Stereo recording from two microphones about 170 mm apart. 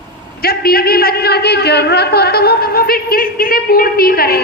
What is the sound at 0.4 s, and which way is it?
A man's voice, 65° left (ahead or behind).